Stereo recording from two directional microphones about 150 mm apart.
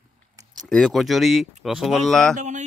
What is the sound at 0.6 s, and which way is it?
A man's voice, centre (ahead or behind).